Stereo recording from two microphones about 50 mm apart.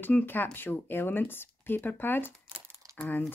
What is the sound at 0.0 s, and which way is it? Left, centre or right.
Speech, left.